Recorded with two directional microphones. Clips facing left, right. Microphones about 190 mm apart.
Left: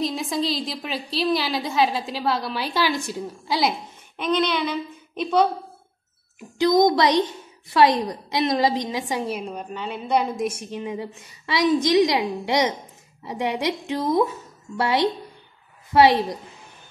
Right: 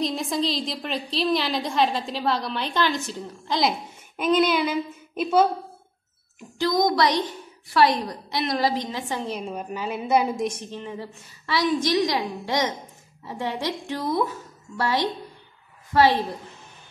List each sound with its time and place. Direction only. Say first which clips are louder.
0.0 s a woman's voice: even; centre (ahead or behind)
4.2 s speech: right 2 dB; 5° right (ahead or behind)
6.6 s a woman's voice: left 4 dB; 20° left (ahead or behind); by 10.4 s 5° right (ahead or behind)
10.4 s a woman's voice: left 2 dB; 10° left (ahead or behind)